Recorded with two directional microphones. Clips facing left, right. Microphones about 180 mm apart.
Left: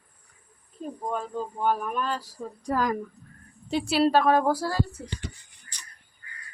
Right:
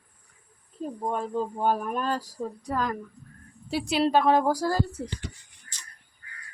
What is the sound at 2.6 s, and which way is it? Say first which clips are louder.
Speech: left 4 dB; 10° left (ahead or behind).